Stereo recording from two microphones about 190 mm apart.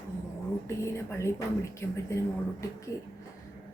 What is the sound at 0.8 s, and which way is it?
Speech, 15° left (ahead or behind).